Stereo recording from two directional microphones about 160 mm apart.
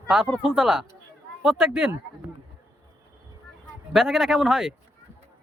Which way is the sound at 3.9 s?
Centre (ahead or behind).